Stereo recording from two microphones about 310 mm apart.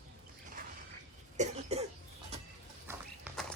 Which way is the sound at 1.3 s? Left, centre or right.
Right.